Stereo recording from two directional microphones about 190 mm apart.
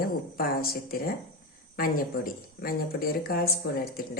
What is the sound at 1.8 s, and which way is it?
A woman's voice, 50° left (ahead or behind).